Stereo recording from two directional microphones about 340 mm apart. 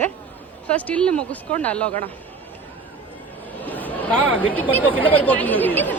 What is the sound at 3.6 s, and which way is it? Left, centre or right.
Chatter, centre.